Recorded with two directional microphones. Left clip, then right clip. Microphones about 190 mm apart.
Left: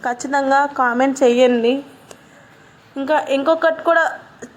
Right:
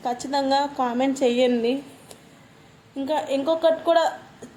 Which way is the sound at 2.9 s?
10° left (ahead or behind).